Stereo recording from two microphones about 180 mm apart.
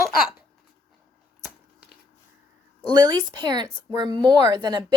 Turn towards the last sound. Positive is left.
turn(degrees=-20)  # may be behind; listen again after turning